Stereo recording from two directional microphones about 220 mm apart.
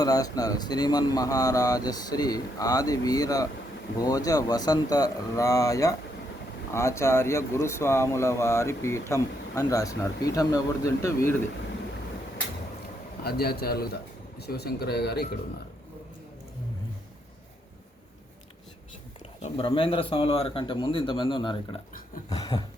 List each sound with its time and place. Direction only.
0.0 s speech: 15° left (ahead or behind)
13.2 s speech: 45° left (ahead or behind)
19.4 s speech: 25° left (ahead or behind)